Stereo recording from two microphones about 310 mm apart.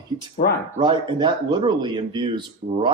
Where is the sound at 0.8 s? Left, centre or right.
Centre.